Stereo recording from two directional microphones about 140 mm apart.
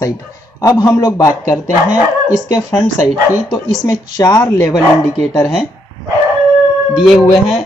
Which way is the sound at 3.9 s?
25° left (ahead or behind).